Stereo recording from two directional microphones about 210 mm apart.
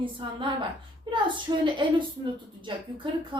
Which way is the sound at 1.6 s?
20° right (ahead or behind).